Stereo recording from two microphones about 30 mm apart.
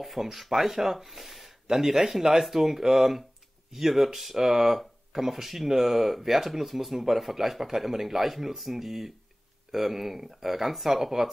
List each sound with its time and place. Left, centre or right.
0.0 s speech: centre